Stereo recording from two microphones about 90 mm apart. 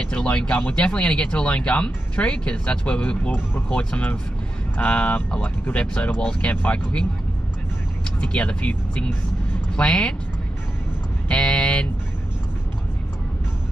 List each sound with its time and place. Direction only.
0.0 s speech: 10° left (ahead or behind)
8.2 s speech: 10° left (ahead or behind)
11.2 s a sound: 10° left (ahead or behind)